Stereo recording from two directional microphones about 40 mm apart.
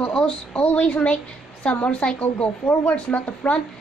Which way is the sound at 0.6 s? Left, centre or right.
Left.